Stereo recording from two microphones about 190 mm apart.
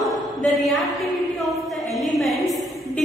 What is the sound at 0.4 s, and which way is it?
Speech, centre (ahead or behind).